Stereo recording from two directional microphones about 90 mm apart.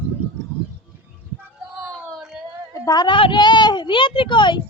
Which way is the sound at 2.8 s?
45° left (ahead or behind).